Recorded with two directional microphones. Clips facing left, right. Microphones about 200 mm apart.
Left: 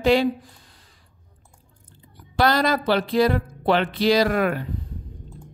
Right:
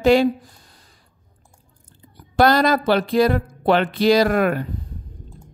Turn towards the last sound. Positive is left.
turn(degrees=-50)  # may be behind; listen again after turning